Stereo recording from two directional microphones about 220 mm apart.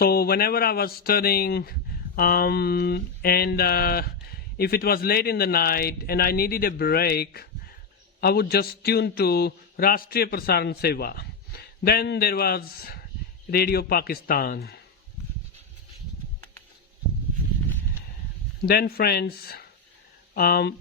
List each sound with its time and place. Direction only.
0.0 s speech: 45° left (ahead or behind)
18.6 s speech: 45° left (ahead or behind)